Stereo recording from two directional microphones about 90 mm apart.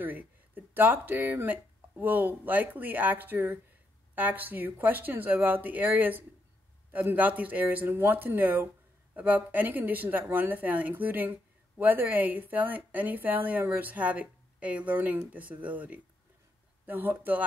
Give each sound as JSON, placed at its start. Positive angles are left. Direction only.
{"t": 0.0, "sound": "a woman's voice", "side_deg": -20}